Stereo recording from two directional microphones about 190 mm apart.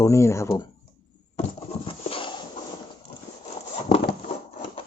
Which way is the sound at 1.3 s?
30° left (ahead or behind).